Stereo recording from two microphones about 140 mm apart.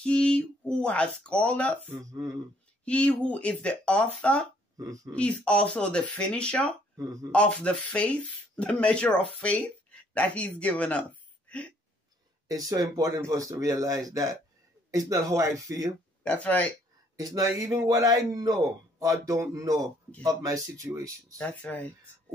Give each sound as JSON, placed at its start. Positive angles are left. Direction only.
{"t": 0.0, "sound": "speech", "side_deg": 5}
{"t": 1.9, "sound": "speech", "side_deg": -25}
{"t": 2.8, "sound": "speech", "side_deg": 10}
{"t": 4.7, "sound": "speech", "side_deg": -25}
{"t": 5.1, "sound": "speech", "side_deg": 10}
{"t": 7.0, "sound": "speech", "side_deg": -20}
{"t": 7.3, "sound": "speech", "side_deg": 10}
{"t": 12.4, "sound": "speech", "side_deg": -25}
{"t": 16.3, "sound": "speech", "side_deg": 10}
{"t": 17.2, "sound": "speech", "side_deg": -25}
{"t": 21.4, "sound": "speech", "side_deg": 10}